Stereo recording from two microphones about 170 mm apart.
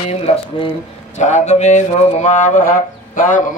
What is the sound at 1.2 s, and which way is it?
Mantra, 45° left (ahead or behind).